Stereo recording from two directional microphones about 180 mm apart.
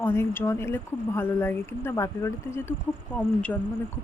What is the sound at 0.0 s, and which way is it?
Speech, 10° left (ahead or behind).